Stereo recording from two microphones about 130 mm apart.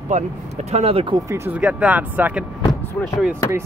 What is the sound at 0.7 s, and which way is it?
Speech, 50° right (ahead or behind).